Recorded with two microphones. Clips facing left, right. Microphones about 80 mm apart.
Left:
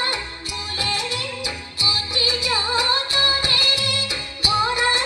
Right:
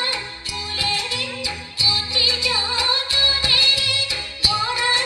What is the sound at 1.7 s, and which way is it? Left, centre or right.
Music, left.